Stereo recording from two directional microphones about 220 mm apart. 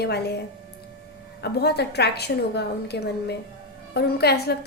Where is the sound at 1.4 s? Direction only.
50° left (ahead or behind).